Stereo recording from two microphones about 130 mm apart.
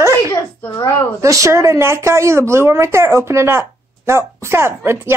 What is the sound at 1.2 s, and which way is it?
Speech, 25° right (ahead or behind).